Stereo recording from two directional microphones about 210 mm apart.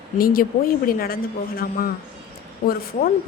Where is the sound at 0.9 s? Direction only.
45° left (ahead or behind).